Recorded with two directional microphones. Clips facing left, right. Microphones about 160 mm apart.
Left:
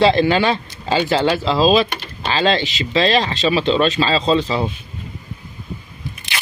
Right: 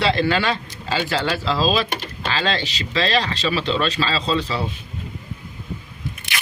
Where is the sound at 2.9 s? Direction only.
30° left (ahead or behind).